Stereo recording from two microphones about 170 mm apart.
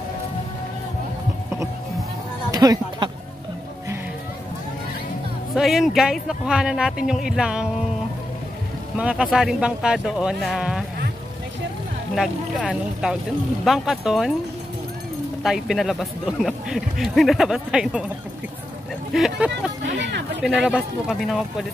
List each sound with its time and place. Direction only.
2.5 s a sound: 20° right (ahead or behind)
5.5 s speech: centre (ahead or behind)
8.9 s speech: 5° right (ahead or behind)
12.2 s speech: centre (ahead or behind)
15.4 s speech: centre (ahead or behind)
19.1 s speech: centre (ahead or behind)
20.0 s speech: 90° right
20.4 s speech: 5° right (ahead or behind)